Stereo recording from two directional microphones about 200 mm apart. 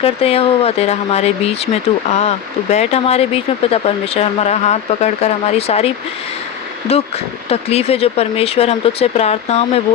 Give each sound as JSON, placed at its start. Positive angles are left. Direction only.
{"t": 0.0, "sound": "speech", "side_deg": 30}
{"t": 7.5, "sound": "speech", "side_deg": 30}